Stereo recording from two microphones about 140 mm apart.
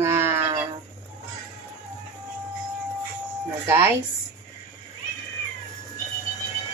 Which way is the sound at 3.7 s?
15° right (ahead or behind).